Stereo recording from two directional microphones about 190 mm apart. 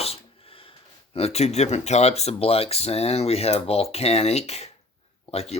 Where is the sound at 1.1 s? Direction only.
35° left (ahead or behind).